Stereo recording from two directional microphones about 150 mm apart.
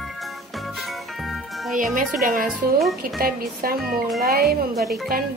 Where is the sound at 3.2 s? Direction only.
80° right.